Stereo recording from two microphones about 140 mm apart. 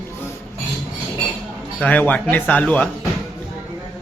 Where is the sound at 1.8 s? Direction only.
10° left (ahead or behind).